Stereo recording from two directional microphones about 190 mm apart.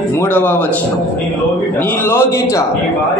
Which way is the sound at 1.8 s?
10° left (ahead or behind).